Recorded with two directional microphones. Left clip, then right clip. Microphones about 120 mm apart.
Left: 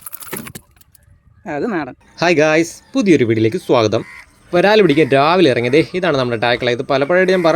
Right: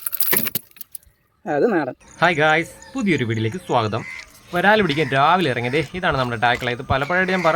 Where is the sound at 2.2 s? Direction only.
35° left (ahead or behind).